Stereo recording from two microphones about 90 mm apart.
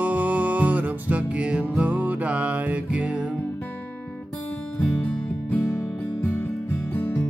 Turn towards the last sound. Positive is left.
turn(degrees=20)  # may be behind; listen again after turning